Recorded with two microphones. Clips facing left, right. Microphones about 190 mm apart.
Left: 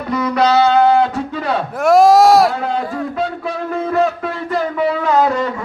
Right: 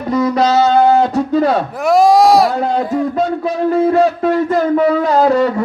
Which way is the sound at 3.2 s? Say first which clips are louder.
Right 5 dB; 40° right (ahead or behind).